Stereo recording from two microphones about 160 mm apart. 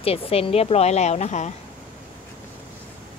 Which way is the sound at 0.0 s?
35° left (ahead or behind).